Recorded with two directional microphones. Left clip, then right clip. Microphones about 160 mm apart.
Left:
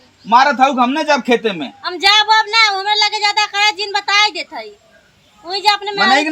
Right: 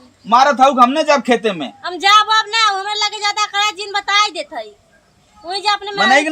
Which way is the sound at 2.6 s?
40° right (ahead or behind).